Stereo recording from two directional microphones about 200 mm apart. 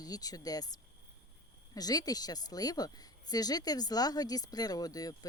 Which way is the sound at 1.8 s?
20° left (ahead or behind).